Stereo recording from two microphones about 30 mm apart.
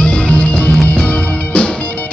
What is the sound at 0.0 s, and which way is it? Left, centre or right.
Music, left.